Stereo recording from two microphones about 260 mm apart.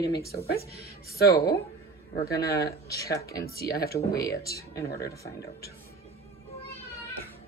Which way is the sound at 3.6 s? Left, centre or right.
Left.